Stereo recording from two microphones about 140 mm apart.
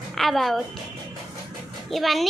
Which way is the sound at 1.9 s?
Centre (ahead or behind).